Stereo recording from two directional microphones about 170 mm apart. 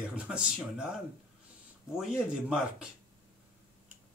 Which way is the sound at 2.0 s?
5° right (ahead or behind).